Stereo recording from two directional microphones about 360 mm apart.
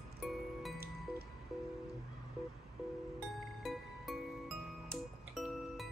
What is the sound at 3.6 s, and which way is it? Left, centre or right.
Music, centre.